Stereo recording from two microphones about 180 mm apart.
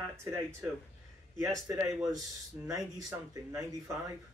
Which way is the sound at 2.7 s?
20° right (ahead or behind).